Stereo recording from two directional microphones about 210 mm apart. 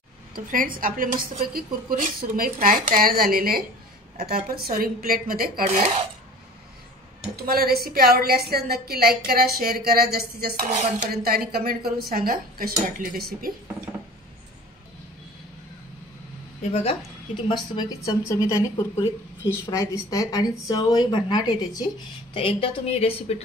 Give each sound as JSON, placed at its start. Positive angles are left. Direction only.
{"t": 0.5, "sound": "speech", "side_deg": -40}
{"t": 7.4, "sound": "speech", "side_deg": -45}
{"t": 17.5, "sound": "a woman's voice", "side_deg": 20}